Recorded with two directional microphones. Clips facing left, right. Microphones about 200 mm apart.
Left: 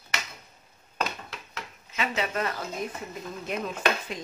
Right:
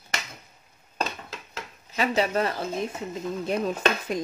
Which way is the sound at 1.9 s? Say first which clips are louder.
Right 5 dB; 35° right (ahead or behind).